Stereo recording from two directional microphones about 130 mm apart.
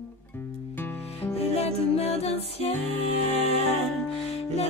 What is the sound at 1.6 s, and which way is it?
Music, 50° left (ahead or behind).